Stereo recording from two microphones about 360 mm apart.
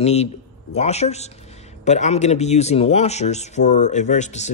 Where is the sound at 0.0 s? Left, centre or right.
Centre.